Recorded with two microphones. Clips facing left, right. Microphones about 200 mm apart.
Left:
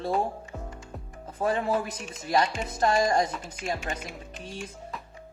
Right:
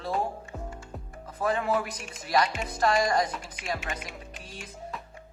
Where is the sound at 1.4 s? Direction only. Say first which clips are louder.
Left 1 dB; 30° left (ahead or behind).